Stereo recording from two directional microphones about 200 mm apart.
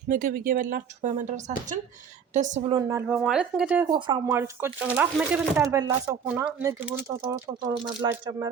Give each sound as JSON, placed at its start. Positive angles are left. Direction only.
{"t": 0.1, "sound": "a woman's voice", "side_deg": -45}
{"t": 2.7, "sound": "speech", "side_deg": -15}
{"t": 3.1, "sound": "speech", "side_deg": -5}
{"t": 3.8, "sound": "speech", "side_deg": -20}